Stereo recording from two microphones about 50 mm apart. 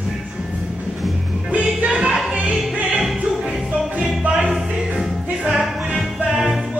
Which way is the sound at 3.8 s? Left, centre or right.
Centre.